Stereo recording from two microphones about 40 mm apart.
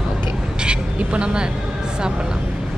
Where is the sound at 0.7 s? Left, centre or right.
Right.